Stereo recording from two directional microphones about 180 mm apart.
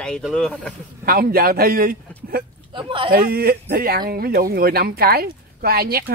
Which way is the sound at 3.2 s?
55° right (ahead or behind).